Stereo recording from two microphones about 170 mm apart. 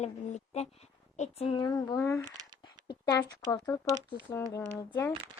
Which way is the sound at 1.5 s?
25° left (ahead or behind).